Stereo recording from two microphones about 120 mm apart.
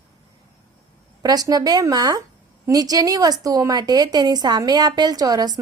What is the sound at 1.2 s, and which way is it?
A woman's voice, 30° right (ahead or behind).